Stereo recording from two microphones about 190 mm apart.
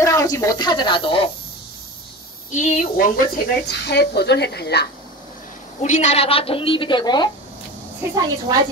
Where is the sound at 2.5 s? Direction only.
40° left (ahead or behind); by 4.9 s 60° left (ahead or behind).